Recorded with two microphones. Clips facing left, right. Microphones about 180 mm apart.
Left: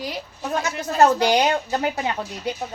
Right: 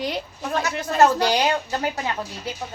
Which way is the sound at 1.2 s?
20° left (ahead or behind).